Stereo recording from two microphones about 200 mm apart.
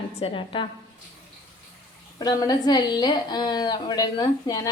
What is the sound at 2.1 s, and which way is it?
A woman's voice, 20° left (ahead or behind).